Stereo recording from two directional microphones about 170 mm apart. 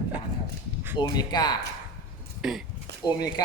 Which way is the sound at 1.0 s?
25° left (ahead or behind).